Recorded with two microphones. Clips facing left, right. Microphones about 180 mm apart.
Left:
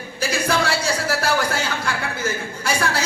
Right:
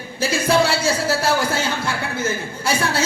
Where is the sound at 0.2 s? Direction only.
25° right (ahead or behind).